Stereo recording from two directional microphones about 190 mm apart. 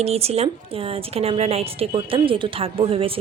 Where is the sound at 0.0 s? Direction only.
30° right (ahead or behind).